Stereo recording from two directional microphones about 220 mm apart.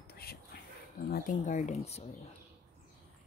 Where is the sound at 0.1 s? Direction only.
45° left (ahead or behind).